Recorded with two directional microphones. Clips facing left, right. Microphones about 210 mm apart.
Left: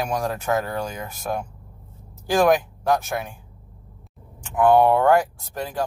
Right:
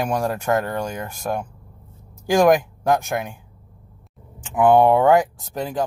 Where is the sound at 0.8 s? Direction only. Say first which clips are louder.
Right 2 dB; 5° right (ahead or behind).